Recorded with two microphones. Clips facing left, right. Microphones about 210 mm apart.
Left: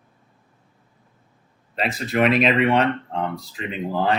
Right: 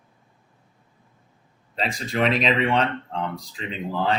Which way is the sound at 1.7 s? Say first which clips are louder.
Left 3 dB; 5° left (ahead or behind).